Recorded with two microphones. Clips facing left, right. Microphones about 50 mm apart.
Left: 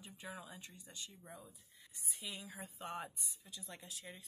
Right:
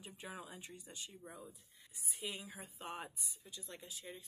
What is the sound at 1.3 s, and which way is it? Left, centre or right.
Speech, centre.